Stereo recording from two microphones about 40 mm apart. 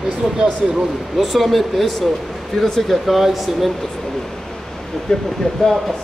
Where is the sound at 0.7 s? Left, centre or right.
Centre.